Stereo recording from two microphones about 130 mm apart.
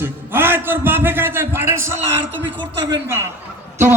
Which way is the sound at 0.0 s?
15° right (ahead or behind).